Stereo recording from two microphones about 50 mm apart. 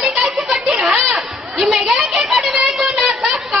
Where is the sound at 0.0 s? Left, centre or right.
Centre.